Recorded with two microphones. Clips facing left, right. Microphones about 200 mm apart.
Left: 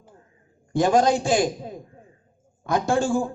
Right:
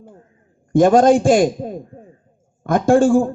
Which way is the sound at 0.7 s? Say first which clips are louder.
Right 8 dB; 50° right (ahead or behind).